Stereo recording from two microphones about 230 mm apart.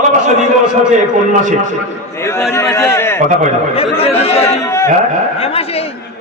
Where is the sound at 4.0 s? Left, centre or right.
Left.